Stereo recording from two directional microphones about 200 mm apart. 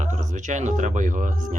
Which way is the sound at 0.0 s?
35° right (ahead or behind).